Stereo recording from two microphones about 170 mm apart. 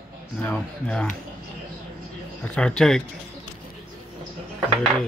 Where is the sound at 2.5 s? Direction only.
5° left (ahead or behind).